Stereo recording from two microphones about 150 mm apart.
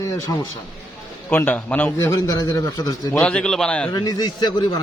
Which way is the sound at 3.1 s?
5° left (ahead or behind).